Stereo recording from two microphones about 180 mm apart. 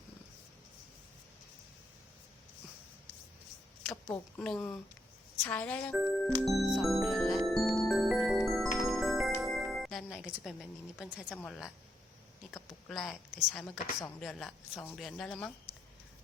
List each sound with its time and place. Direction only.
4.4 s speech: 5° left (ahead or behind)
6.2 s music: centre (ahead or behind)
11.3 s speech: 5° left (ahead or behind)
12.9 s speech: centre (ahead or behind)